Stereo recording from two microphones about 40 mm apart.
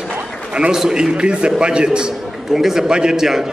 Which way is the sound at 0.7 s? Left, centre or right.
Centre.